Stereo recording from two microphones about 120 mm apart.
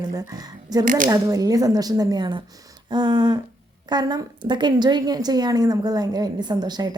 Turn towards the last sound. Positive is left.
turn(degrees=-35)  # may be behind; listen again after turning